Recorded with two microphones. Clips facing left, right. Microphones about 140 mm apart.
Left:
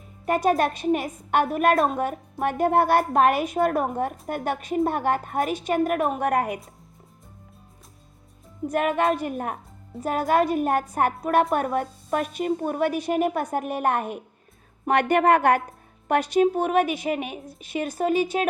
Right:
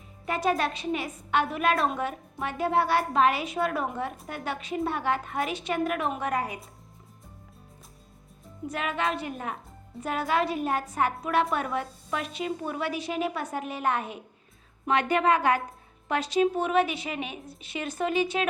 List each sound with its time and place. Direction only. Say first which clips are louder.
0.3 s a woman's voice: left 5 dB; 45° left (ahead or behind)
8.7 s a woman's voice: left 7 dB; 50° left (ahead or behind)